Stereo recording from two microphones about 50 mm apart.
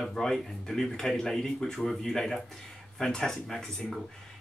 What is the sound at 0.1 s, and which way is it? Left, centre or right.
Speech, centre.